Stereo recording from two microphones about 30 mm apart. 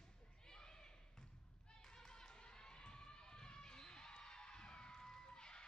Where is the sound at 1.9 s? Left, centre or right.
Left.